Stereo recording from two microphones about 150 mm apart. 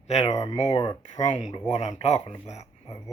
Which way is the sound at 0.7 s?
25° left (ahead or behind).